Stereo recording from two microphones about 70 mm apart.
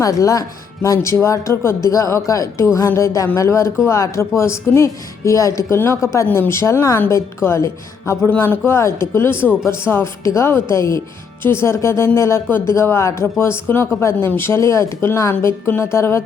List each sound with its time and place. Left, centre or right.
0.0 s speech: left
8.3 s speech: left